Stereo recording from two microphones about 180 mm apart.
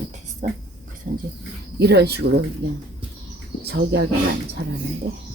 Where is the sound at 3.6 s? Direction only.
70° right (ahead or behind).